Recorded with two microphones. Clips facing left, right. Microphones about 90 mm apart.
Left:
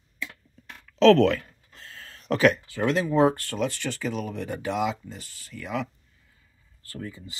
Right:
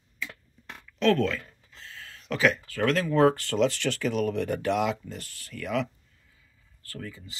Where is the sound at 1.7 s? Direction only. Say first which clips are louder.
Even; 45° left (ahead or behind).